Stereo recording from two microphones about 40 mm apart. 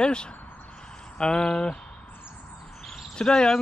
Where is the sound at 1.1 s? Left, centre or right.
Centre.